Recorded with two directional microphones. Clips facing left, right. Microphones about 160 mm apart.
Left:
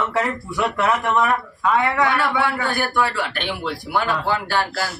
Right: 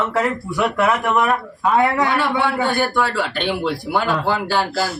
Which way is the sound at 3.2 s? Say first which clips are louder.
Right 4 dB; 25° right (ahead or behind).